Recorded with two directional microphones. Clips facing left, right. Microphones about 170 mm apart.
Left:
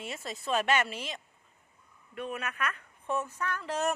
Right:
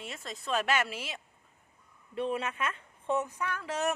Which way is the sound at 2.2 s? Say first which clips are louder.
Right 3 dB; 30° right (ahead or behind).